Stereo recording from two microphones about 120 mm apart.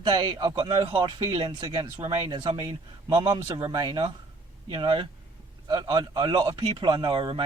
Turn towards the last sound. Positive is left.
turn(degrees=-40)  # may be behind; listen again after turning